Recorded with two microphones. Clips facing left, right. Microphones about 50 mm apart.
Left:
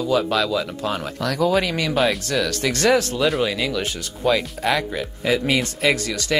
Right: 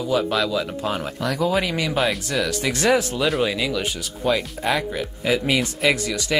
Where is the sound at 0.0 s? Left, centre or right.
Centre.